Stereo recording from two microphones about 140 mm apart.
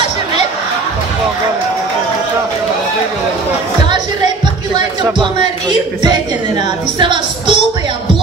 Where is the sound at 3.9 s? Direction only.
35° right (ahead or behind).